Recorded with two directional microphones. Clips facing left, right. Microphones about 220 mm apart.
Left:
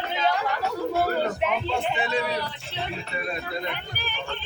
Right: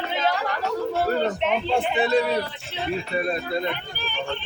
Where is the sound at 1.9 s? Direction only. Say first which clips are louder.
Right 7 dB; 35° right (ahead or behind).